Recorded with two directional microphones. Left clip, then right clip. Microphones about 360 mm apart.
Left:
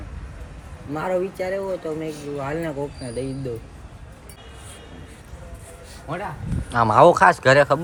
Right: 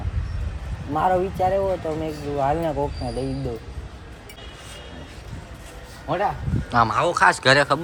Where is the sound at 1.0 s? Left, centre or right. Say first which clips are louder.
Right 4 dB; centre.